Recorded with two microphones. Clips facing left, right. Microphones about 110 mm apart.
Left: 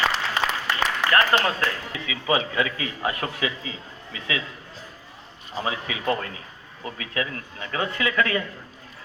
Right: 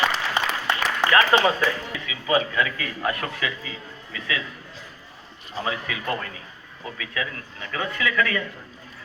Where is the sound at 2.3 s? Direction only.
20° left (ahead or behind).